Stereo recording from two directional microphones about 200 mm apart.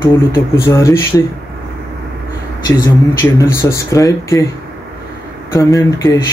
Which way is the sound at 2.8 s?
15° left (ahead or behind).